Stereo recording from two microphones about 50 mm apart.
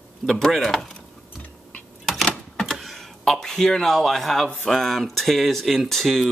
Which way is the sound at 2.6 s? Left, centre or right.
Centre.